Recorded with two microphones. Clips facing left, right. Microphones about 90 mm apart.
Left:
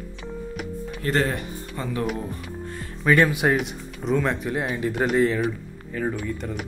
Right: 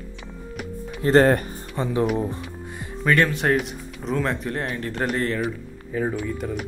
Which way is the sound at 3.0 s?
10° left (ahead or behind).